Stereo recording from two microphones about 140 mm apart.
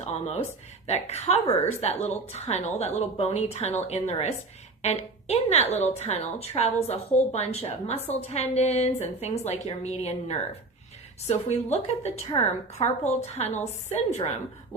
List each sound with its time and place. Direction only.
0.0 s a woman's voice: 50° left (ahead or behind)
12.3 s a woman's voice: 35° left (ahead or behind)
12.8 s a woman's voice: 50° left (ahead or behind)